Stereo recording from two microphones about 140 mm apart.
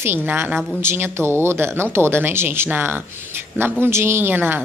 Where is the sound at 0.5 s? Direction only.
Centre (ahead or behind).